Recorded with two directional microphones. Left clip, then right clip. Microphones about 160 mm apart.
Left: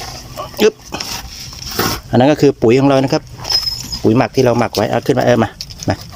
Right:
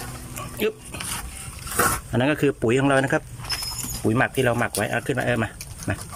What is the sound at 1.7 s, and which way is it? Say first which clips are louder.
Wild animals: left 7 dB; 35° left (ahead or behind).